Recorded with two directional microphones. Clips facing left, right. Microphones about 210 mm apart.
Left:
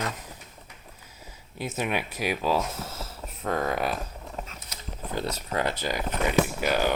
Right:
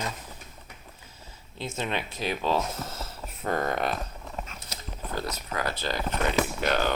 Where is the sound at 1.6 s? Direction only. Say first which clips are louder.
Left 2 dB; 10° left (ahead or behind).